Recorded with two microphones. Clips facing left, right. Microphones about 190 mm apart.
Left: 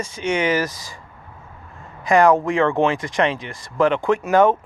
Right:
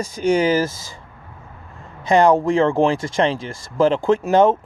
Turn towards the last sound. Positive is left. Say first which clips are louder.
# right 1 dB
turn(degrees=-25)  # may be behind; listen again after turning